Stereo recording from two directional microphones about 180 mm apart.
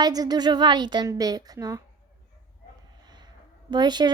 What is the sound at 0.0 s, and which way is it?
A child's voice, 20° right (ahead or behind).